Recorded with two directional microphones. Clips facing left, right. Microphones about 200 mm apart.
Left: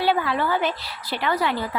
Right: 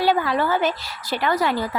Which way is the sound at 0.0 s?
40° right (ahead or behind).